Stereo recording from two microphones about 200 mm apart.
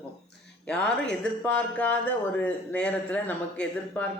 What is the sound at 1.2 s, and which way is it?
A man's voice, 5° left (ahead or behind).